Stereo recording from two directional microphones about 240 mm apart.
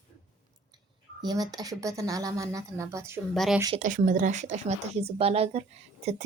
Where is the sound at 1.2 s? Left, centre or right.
Centre.